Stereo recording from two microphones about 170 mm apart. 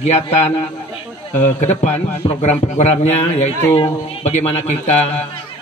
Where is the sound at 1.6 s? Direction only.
40° left (ahead or behind).